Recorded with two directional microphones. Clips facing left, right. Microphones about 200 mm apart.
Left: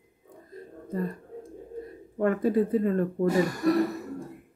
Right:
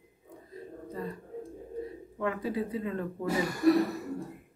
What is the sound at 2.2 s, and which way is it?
Speech, 50° left (ahead or behind).